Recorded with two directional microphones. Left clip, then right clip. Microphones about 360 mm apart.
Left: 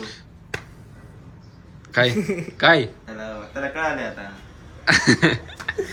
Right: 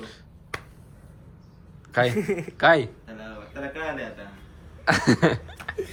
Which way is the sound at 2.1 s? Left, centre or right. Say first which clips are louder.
Left 1 dB; right.